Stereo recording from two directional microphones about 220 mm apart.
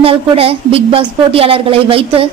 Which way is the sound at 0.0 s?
25° right (ahead or behind).